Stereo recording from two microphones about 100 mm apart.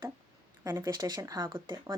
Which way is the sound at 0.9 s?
40° right (ahead or behind).